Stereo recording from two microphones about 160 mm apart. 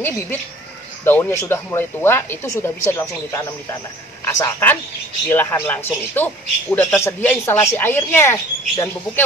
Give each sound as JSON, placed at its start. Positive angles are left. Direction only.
{"t": 1.0, "sound": "speech", "side_deg": 15}